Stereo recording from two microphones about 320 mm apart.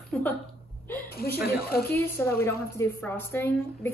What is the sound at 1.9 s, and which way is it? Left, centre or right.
A woman's voice, centre.